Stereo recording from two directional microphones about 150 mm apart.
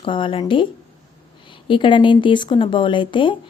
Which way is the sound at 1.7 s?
35° left (ahead or behind).